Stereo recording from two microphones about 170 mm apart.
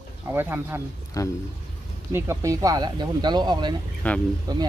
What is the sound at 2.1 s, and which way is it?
Speech, 15° right (ahead or behind).